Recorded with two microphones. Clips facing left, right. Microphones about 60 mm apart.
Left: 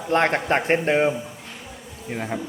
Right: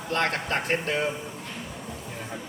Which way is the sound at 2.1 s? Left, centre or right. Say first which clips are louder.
Left 12 dB; left.